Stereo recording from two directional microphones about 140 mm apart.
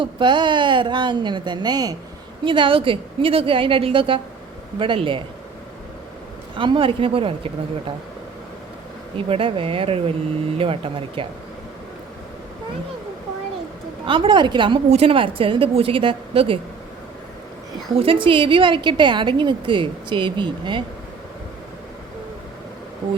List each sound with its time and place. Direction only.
0.0 s a woman's voice: 35° right (ahead or behind)
6.6 s a woman's voice: 40° right (ahead or behind)
9.1 s a woman's voice: 40° right (ahead or behind)
14.0 s a woman's voice: 35° right (ahead or behind)
14.8 s a woman's voice: 45° right (ahead or behind)
17.9 s a woman's voice: 40° right (ahead or behind)